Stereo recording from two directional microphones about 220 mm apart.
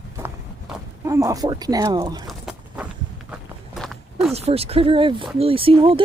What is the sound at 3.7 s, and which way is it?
Walk, centre (ahead or behind).